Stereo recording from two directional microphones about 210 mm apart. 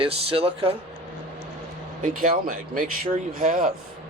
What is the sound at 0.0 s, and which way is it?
Speech, 25° right (ahead or behind).